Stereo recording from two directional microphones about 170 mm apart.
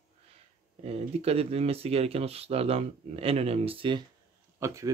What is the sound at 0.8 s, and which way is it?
Speech, 35° right (ahead or behind).